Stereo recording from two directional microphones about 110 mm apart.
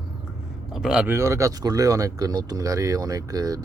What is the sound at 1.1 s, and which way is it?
Speech, 25° right (ahead or behind).